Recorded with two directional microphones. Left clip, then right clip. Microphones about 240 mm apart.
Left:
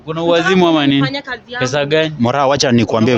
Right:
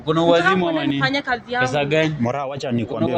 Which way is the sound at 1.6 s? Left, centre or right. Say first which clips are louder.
Left 6 dB; left.